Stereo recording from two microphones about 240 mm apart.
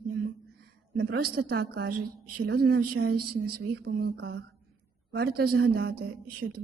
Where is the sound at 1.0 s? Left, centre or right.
Right.